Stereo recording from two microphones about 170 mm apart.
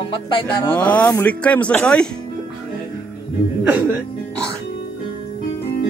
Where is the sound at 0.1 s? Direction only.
30° left (ahead or behind).